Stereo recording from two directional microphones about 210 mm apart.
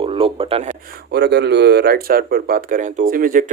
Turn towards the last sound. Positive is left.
turn(degrees=-40)  # may be behind; listen again after turning